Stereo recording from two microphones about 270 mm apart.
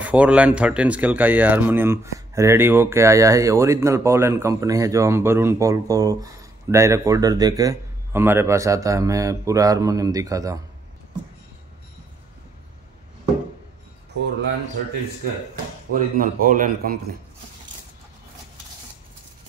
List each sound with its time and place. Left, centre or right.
0.0 s speech: centre
15.9 s speech: right